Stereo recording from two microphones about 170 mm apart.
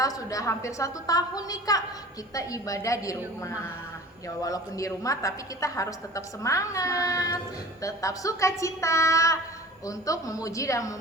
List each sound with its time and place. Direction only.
0.0 s a woman's voice: 20° left (ahead or behind)
4.4 s a woman's voice: 20° left (ahead or behind)